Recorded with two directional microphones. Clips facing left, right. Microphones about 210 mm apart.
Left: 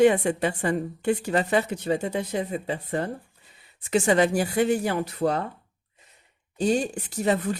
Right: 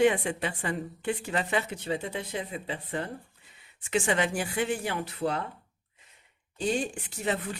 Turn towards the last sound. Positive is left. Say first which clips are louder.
# left 6 dB
turn(degrees=40)  # may be behind; listen again after turning